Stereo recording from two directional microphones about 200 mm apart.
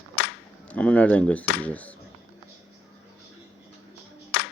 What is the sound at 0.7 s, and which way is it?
Speech, 5° left (ahead or behind).